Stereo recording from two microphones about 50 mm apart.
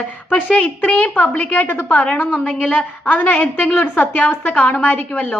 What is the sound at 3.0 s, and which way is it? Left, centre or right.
A woman's voice, left.